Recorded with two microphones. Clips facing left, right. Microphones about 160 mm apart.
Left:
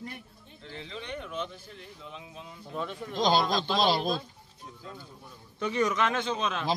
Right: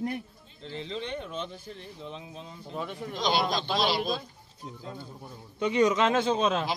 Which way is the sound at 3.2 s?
40° left (ahead or behind).